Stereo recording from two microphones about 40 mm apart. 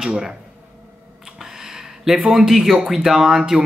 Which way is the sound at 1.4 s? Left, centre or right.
Centre.